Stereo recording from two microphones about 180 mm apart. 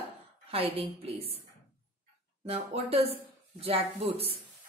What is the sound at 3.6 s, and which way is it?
Speech, 30° right (ahead or behind).